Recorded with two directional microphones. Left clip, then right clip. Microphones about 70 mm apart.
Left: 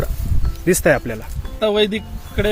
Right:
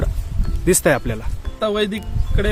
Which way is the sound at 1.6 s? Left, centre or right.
Right.